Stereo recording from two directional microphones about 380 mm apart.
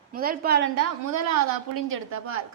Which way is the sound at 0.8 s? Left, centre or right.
Right.